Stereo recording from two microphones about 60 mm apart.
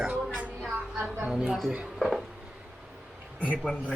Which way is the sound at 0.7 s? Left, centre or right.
Right.